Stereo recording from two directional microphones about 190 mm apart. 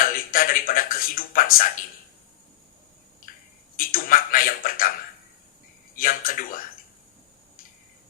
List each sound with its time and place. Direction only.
0.0 s speech: 45° left (ahead or behind)
3.8 s speech: 50° left (ahead or behind)
6.0 s speech: 50° left (ahead or behind)